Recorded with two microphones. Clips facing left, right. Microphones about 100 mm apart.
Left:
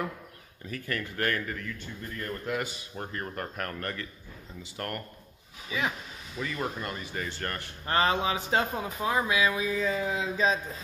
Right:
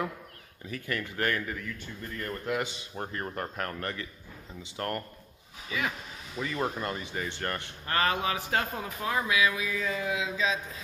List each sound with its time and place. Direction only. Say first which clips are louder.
0.7 s speech: even; 20° right (ahead or behind)
2.6 s speech: right 1 dB; 25° right (ahead or behind)
5.7 s speech: left 1 dB; 20° left (ahead or behind)
6.4 s speech: right 2 dB; 25° right (ahead or behind)
7.8 s speech: left 2 dB; 25° left (ahead or behind); by 10.6 s 40° left (ahead or behind)